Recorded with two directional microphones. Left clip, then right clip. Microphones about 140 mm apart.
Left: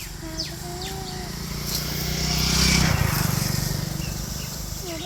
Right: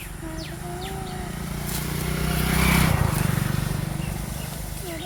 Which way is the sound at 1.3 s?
55° right (ahead or behind).